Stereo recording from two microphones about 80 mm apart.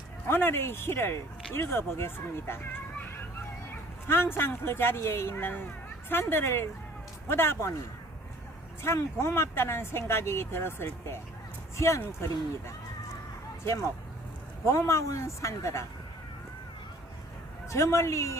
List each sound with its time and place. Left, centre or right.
0.3 s speech: left
4.1 s speech: left
8.8 s speech: left
14.7 s speech: left
17.7 s speech: left